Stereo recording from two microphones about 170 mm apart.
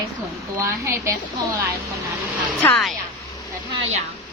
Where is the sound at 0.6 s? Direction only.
15° right (ahead or behind).